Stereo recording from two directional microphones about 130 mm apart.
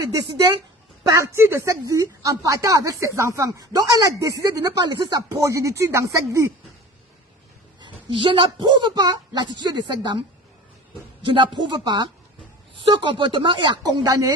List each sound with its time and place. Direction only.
1.0 s speech: 25° right (ahead or behind)
7.8 s a woman's voice: 40° right (ahead or behind)
11.2 s a man's voice: 40° right (ahead or behind)